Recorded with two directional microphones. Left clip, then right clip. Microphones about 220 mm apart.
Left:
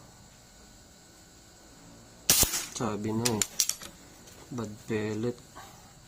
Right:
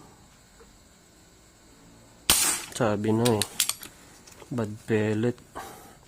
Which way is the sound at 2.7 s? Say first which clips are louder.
Right 10 dB; 40° right (ahead or behind).